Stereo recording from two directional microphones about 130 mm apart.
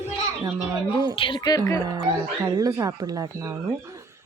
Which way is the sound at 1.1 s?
40° left (ahead or behind).